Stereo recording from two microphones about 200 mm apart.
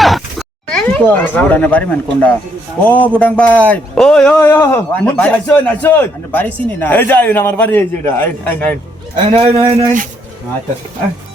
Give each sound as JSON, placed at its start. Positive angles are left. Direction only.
{"t": 0.0, "sound": "a sound", "side_deg": 0}
{"t": 2.8, "sound": "a man's voice", "side_deg": 10}
{"t": 9.3, "sound": "speech", "side_deg": -30}